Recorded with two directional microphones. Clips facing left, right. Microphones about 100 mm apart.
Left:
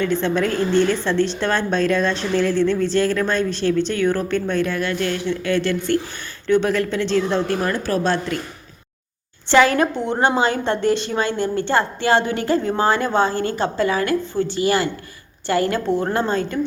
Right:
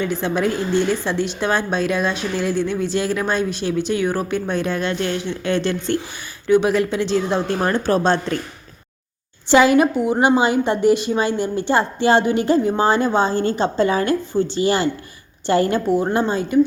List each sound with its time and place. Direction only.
0.0 s a woman's voice: 15° right (ahead or behind)
7.6 s speech: 30° right (ahead or behind)
9.5 s a woman's voice: 15° right (ahead or behind)
15.9 s a woman's voice: 10° right (ahead or behind)